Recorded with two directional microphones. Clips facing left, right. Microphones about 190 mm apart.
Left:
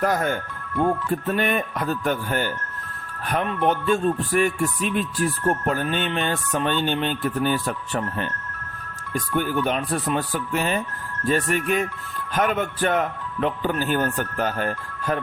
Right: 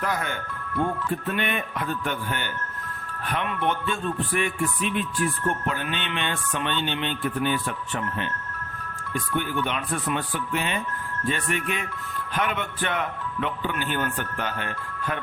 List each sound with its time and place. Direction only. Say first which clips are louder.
0.0 s speech: left 6 dB; 45° left (ahead or behind)